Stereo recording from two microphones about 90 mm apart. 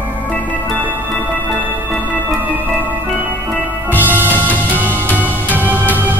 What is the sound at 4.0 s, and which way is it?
Music, 20° right (ahead or behind).